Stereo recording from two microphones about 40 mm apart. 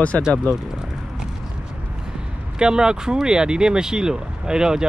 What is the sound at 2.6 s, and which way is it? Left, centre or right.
Speech, centre.